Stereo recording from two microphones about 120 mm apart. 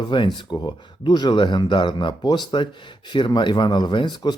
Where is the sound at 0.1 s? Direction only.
40° left (ahead or behind).